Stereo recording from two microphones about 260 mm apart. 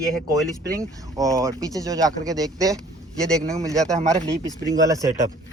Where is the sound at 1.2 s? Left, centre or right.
Centre.